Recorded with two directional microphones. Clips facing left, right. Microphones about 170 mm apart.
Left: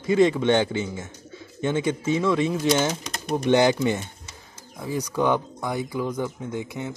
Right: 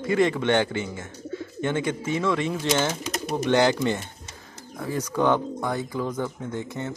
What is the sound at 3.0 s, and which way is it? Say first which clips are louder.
Bird: even; 5° right (ahead or behind).